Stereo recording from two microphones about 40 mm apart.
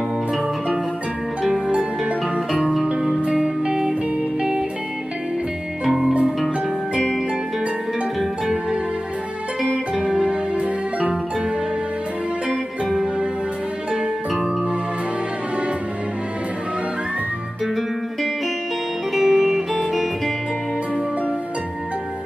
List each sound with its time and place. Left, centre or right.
1.8 s music: right
2.5 s music: centre
9.6 s music: centre
10.0 s music: centre
12.4 s music: centre
19.1 s music: centre